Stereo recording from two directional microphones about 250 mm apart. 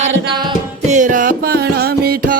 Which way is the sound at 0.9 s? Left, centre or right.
Right.